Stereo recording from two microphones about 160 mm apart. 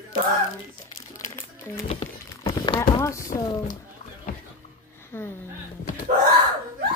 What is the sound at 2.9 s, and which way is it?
Speech, 20° left (ahead or behind).